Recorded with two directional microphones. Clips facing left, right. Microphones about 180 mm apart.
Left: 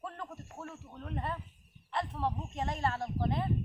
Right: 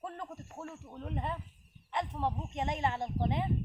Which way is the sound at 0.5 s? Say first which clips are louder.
Right 1 dB; 10° right (ahead or behind).